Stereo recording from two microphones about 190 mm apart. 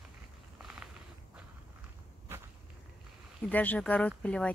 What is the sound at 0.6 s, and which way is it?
Walk, 5° right (ahead or behind).